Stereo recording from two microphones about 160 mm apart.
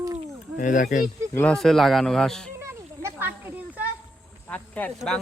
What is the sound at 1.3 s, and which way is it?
Speech, 10° left (ahead or behind).